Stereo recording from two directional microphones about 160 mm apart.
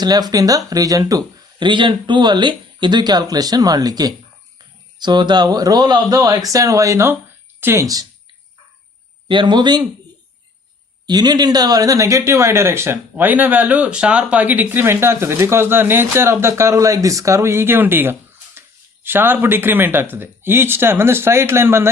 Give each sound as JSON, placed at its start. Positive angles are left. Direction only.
{"t": 0.0, "sound": "speech", "side_deg": -25}
{"t": 9.3, "sound": "speech", "side_deg": -30}
{"t": 11.0, "sound": "speech", "side_deg": -25}